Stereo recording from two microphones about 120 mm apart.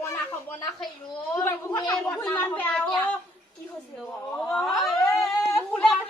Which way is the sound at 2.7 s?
5° left (ahead or behind).